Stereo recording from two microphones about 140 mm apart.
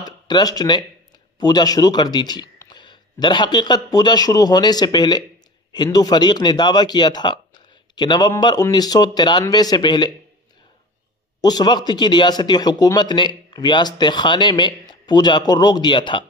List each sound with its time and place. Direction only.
0.0 s a man's voice: 30° left (ahead or behind)
11.4 s a man's voice: 30° left (ahead or behind)